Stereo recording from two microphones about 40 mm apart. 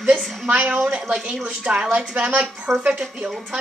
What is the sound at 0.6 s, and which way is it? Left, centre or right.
A woman's voice, right.